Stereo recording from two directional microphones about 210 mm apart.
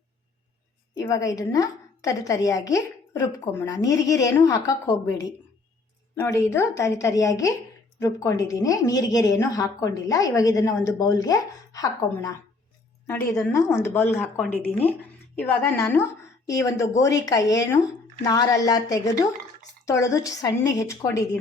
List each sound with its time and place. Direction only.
1.0 s a woman's voice: 15° left (ahead or behind)
6.1 s a woman's voice: 10° left (ahead or behind)